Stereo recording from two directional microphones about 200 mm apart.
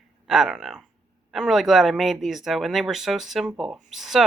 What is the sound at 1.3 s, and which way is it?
Speech, centre (ahead or behind).